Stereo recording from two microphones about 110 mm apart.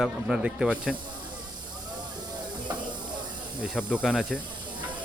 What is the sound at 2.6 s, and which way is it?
Snake, 45° right (ahead or behind).